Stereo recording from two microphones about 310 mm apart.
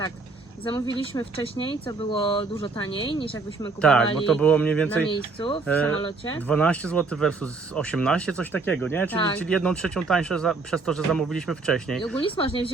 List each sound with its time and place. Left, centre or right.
1.1 s speech: centre
3.8 s speech: centre
5.0 s speech: centre
5.6 s speech: centre
12.2 s speech: centre